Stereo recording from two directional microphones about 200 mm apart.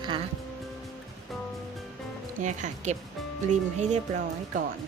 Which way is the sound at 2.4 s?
35° right (ahead or behind).